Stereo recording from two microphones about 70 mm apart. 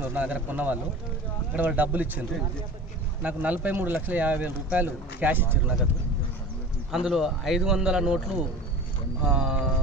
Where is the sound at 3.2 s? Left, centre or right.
Right.